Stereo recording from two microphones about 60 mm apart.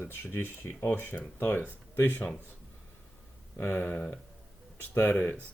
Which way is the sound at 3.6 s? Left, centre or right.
Left.